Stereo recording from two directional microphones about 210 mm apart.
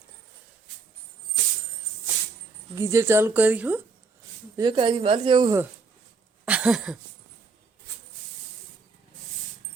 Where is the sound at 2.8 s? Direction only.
15° right (ahead or behind).